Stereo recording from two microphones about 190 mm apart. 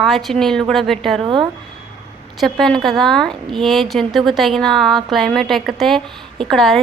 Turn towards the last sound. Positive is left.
turn(degrees=0)  # may be behind; listen again after turning